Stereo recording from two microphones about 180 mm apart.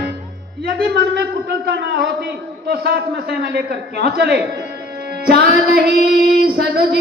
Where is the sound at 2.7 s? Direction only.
60° right (ahead or behind).